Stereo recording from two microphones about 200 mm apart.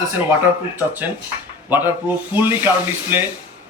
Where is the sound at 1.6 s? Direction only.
10° right (ahead or behind).